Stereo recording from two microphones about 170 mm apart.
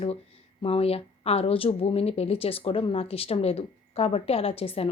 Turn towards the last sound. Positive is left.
turn(degrees=35)  # may be behind; listen again after turning